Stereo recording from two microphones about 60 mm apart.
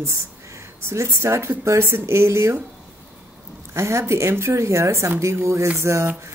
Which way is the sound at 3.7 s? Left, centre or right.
Right.